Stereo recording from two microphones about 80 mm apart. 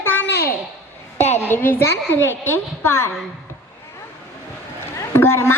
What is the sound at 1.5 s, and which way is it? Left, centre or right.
A woman's voice, left.